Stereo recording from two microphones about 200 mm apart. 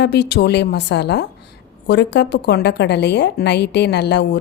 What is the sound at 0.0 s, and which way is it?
A woman's voice, 55° left (ahead or behind).